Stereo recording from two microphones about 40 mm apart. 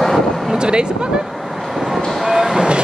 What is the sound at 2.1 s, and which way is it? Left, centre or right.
Train, centre.